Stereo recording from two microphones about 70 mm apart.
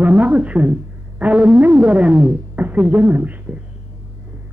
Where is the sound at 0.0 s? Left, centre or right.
Right.